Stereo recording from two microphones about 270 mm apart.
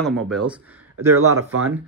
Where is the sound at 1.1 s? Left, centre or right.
Right.